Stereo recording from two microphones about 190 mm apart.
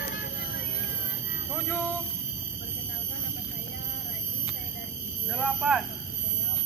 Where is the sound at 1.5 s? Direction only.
15° left (ahead or behind).